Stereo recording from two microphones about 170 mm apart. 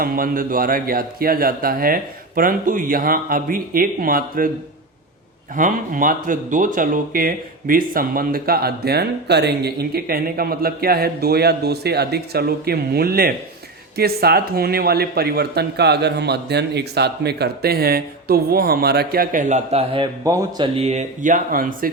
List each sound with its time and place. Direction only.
0.0 s speech: 55° right (ahead or behind)
5.5 s speech: 50° right (ahead or behind); by 20.1 s 35° right (ahead or behind)
20.2 s speech: 20° right (ahead or behind)
20.7 s speech: 40° right (ahead or behind); by 21.8 s 55° right (ahead or behind)